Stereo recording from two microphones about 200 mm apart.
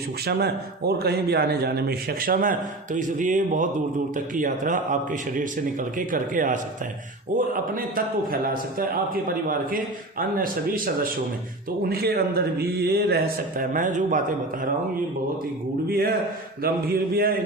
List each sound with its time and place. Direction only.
0.3 s a man's voice: 55° right (ahead or behind)
6.0 s a man's voice: 40° right (ahead or behind)
16.6 s a man's voice: 50° right (ahead or behind)